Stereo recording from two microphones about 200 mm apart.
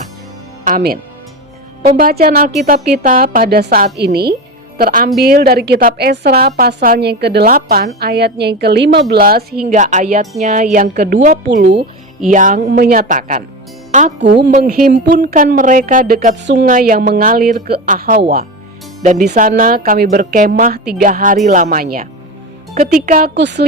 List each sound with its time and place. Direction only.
0.6 s music: 45° right (ahead or behind)
2.0 s a woman's voice: 45° right (ahead or behind)
12.3 s speech: 40° right (ahead or behind)
14.2 s a woman's voice: 60° right (ahead or behind)
14.5 s a woman's voice: 45° right (ahead or behind); by 16.6 s 60° right (ahead or behind)
16.6 s a woman's voice: 45° right (ahead or behind)
19.3 s a woman's voice: 40° right (ahead or behind); by 23.6 s 60° right (ahead or behind)